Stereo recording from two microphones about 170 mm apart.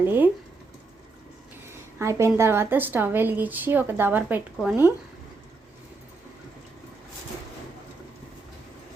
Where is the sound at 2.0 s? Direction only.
15° right (ahead or behind).